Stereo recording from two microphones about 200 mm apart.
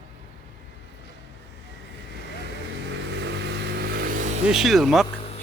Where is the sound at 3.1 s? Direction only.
60° right (ahead or behind).